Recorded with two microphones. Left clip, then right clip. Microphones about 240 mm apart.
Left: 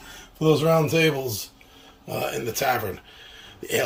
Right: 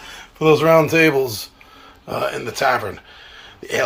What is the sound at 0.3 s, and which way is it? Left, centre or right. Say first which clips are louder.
Speech: right 7 dB; right.